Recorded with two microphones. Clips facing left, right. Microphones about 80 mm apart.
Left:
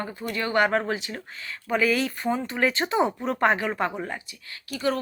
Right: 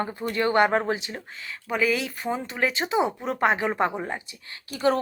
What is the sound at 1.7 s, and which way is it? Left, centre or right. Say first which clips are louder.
Speech: left 2 dB; centre.